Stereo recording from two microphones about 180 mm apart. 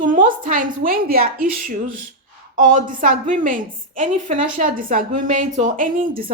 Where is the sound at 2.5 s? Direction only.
45° right (ahead or behind).